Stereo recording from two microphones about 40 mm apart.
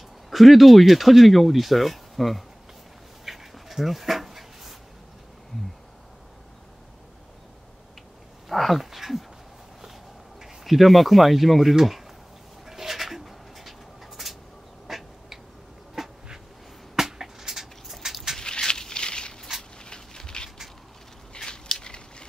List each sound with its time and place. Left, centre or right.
0.3 s speech: centre
3.3 s dog: centre
8.5 s speech: centre
10.6 s speech: centre
12.6 s pigeon: centre
14.9 s duck: centre
15.9 s bee: centre
16.9 s a sound: centre
18.4 s a sound: left